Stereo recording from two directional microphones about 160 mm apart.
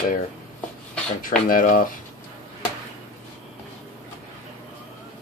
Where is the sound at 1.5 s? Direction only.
60° left (ahead or behind).